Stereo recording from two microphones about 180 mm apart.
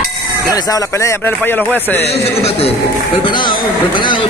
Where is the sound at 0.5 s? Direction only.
20° left (ahead or behind).